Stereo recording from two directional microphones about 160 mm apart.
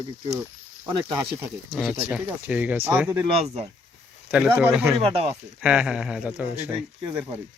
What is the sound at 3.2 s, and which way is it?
Speech, 40° right (ahead or behind).